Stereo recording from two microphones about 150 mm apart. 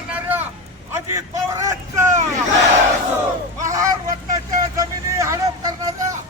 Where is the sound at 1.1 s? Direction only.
20° right (ahead or behind).